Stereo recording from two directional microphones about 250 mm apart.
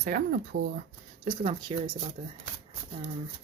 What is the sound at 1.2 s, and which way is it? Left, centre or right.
Speech, right.